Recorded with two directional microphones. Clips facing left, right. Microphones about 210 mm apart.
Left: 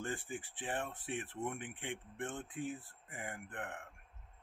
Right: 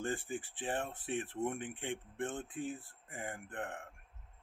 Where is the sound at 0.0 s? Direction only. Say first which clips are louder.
Right 4 dB; 35° right (ahead or behind).